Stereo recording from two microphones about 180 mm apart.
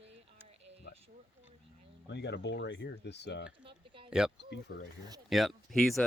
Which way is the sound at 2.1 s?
70° left (ahead or behind).